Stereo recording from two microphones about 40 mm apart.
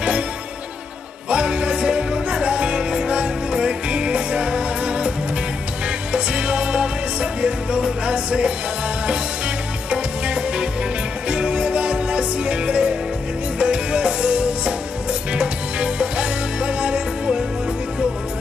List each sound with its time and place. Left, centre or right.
1.3 s music: right
9.8 s music: right